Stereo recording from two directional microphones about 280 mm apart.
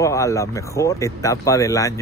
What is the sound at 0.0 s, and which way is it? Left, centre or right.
Speech, centre.